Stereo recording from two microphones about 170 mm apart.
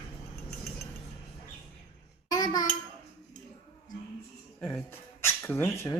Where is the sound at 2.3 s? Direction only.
20° left (ahead or behind).